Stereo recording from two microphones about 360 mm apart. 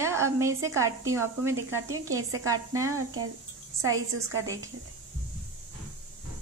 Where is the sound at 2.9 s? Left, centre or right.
Right.